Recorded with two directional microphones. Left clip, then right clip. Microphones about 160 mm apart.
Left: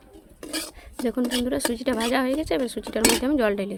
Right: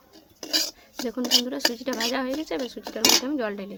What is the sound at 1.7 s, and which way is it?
Speech, 45° left (ahead or behind).